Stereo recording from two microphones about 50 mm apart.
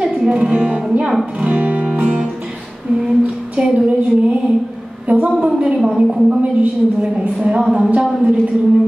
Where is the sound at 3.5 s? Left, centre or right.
Right.